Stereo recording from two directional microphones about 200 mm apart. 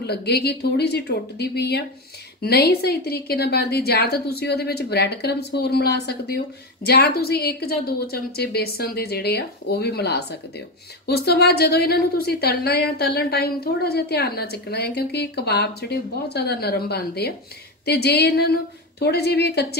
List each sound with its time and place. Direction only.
0.0 s a woman's voice: 55° left (ahead or behind)